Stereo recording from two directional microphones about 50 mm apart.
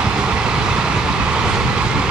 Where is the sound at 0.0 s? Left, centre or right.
Centre.